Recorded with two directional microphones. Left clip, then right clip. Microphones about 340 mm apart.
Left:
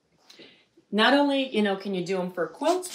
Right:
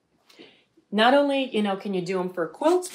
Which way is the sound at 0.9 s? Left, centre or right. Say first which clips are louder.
Right 2 dB; centre.